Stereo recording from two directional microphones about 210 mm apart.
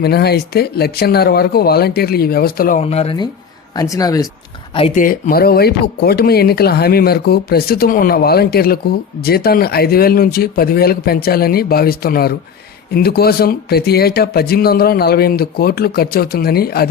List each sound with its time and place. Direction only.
0.0 s speech: 50° left (ahead or behind)
2.8 s speech: 30° left (ahead or behind)
3.8 s speech: 15° left (ahead or behind)
4.9 s speech: 40° left (ahead or behind)